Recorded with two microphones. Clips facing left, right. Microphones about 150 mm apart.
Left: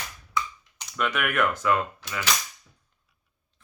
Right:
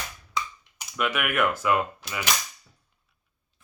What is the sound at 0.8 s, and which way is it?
Speech, 5° right (ahead or behind).